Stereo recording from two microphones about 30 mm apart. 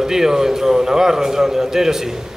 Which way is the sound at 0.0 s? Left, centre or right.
Centre.